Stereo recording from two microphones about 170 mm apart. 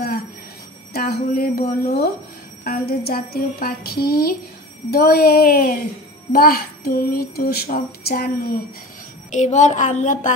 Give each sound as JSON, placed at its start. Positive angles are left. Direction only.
{"t": 0.9, "sound": "speech", "side_deg": 65}
{"t": 9.3, "sound": "speech", "side_deg": 45}